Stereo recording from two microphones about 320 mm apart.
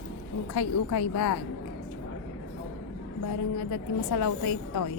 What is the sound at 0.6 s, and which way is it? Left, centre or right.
Speech, left.